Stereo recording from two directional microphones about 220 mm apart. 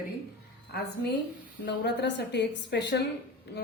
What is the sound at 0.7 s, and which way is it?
A woman's voice, 45° left (ahead or behind).